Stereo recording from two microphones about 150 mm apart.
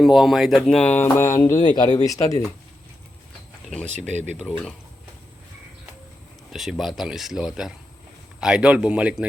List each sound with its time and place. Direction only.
0.0 s speech: centre (ahead or behind); by 2.4 s 20° left (ahead or behind)
3.8 s speech: 50° right (ahead or behind)
4.4 s speech: 5° left (ahead or behind)
6.5 s a man's voice: centre (ahead or behind)